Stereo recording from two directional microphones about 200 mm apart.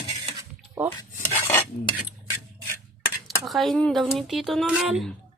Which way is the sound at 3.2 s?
Centre (ahead or behind).